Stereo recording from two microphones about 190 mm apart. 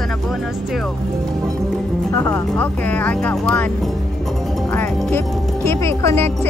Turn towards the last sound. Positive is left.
turn(degrees=10)  # may be behind; listen again after turning